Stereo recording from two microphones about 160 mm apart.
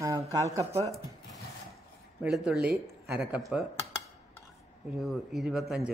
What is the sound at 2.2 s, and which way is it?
Speech, centre (ahead or behind).